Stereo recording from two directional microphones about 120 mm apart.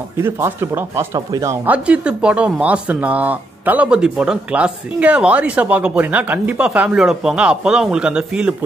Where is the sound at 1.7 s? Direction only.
10° right (ahead or behind).